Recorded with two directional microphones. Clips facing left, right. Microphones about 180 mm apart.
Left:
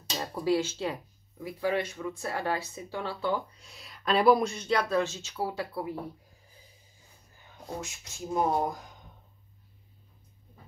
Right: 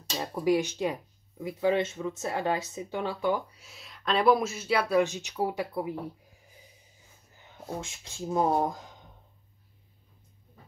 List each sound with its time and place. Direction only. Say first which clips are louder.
0.1 s speech: right 2 dB; 15° right (ahead or behind)
7.8 s speech: right 2 dB; 25° right (ahead or behind)